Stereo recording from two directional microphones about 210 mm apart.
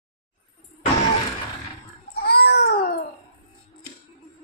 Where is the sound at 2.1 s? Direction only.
50° left (ahead or behind).